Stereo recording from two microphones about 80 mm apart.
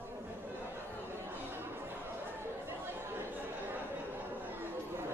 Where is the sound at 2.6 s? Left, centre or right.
Right.